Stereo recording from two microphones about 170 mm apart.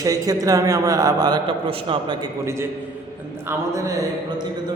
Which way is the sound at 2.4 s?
15° right (ahead or behind).